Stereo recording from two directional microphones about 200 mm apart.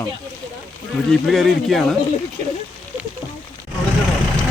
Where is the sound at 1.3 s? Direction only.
Centre (ahead or behind).